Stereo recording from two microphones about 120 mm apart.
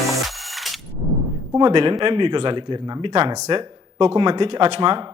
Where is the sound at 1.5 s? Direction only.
45° right (ahead or behind).